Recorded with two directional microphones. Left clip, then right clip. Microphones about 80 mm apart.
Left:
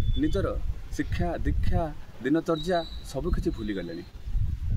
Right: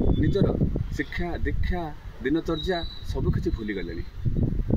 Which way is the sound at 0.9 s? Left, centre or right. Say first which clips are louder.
Even; left.